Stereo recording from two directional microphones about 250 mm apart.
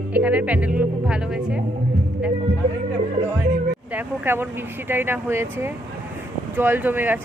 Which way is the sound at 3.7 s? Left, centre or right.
Centre.